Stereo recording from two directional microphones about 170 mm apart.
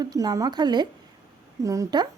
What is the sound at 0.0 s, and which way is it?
A woman's voice, 20° right (ahead or behind).